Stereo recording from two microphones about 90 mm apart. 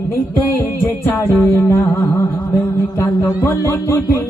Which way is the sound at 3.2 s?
25° left (ahead or behind).